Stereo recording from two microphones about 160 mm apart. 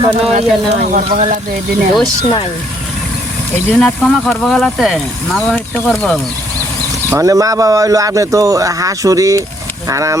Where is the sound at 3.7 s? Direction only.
5° left (ahead or behind).